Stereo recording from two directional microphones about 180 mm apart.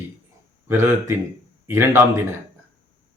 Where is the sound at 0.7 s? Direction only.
15° right (ahead or behind).